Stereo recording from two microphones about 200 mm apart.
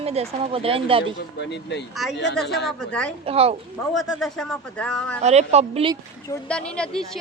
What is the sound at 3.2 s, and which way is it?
Speech, 30° right (ahead or behind).